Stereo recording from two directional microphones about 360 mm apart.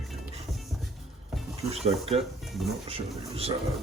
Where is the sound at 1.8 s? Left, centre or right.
Centre.